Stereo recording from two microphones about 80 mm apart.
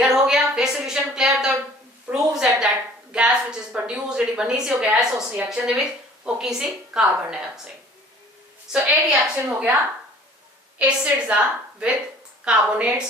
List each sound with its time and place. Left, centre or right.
0.2 s a sound: centre
5.5 s a woman's voice: centre
8.7 s a woman's voice: centre
9.3 s a woman's voice: centre
10.8 s a woman's voice: centre